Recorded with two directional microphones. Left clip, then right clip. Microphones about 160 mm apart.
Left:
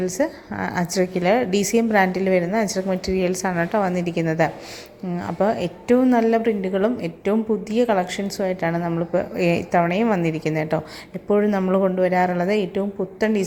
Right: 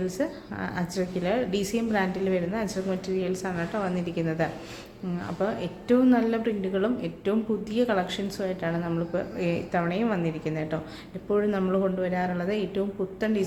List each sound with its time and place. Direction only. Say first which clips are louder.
0.0 s a woman's voice: left 7 dB; 40° left (ahead or behind)
11.3 s a woman's voice: left 6 dB; 35° left (ahead or behind)